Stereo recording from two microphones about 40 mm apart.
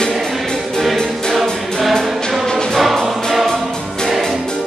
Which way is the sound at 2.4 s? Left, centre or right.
Centre.